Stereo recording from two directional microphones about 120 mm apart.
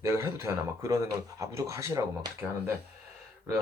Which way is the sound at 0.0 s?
20° right (ahead or behind).